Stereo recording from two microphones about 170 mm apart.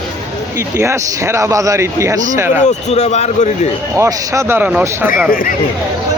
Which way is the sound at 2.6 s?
40° left (ahead or behind).